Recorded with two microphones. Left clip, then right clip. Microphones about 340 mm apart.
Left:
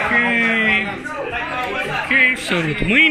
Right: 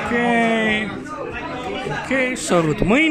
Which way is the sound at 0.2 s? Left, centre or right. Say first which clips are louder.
Left 1 dB; right.